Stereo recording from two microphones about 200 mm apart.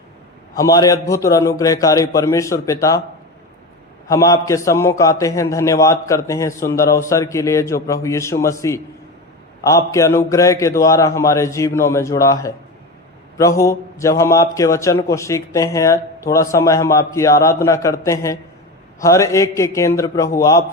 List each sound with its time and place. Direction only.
0.6 s a man's voice: 15° left (ahead or behind)
4.1 s a man's voice: 15° left (ahead or behind)